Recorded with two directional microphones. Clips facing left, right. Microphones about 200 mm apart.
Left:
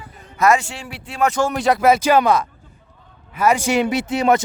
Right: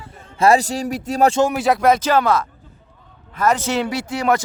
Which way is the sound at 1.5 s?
Centre (ahead or behind).